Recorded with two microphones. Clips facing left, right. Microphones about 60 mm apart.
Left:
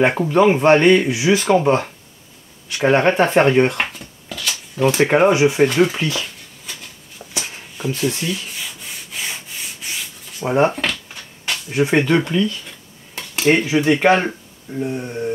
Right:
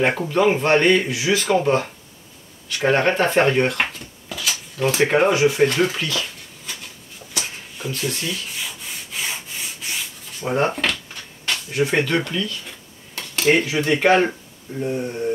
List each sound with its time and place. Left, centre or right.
0.0 s speech: centre
3.7 s a sound: centre
4.7 s speech: centre
5.0 s speech: centre
6.2 s a sound: centre
8.5 s rub: centre
10.4 s speech: centre
10.7 s a sound: centre
11.7 s speech: centre
13.1 s speech: centre